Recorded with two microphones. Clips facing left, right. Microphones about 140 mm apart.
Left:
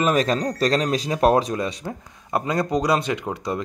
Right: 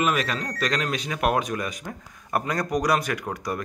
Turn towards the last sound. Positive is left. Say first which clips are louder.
# left 3 dB
turn(degrees=25)  # may be behind; listen again after turning